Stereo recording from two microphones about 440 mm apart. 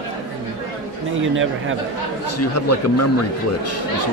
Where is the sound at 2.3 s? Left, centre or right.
Left.